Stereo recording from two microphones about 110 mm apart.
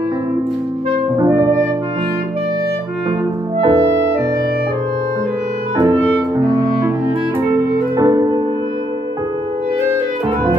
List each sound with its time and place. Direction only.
1.1 s music: 30° right (ahead or behind)
3.6 s clarinet: 30° right (ahead or behind)
5.8 s music: 30° right (ahead or behind)